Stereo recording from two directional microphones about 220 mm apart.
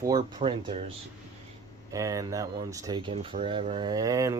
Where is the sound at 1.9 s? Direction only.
15° right (ahead or behind).